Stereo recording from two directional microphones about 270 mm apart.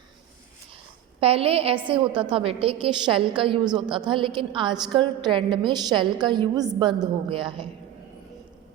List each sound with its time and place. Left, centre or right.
1.2 s a woman's voice: right